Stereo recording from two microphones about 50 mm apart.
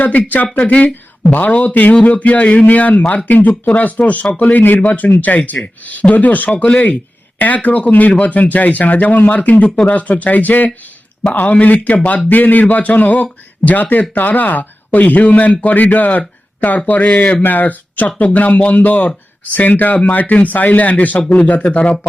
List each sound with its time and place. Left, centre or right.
0.0 s speech: left